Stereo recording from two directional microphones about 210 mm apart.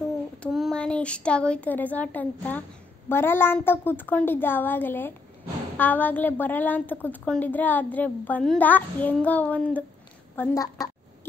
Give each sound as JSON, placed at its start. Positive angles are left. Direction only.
{"t": 0.4, "sound": "a woman's voice", "side_deg": 0}